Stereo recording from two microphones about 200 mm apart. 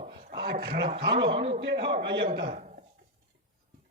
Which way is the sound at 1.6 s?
60° right (ahead or behind).